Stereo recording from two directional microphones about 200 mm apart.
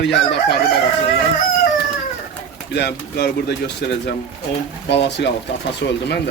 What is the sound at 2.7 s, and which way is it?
Speech, 55° left (ahead or behind).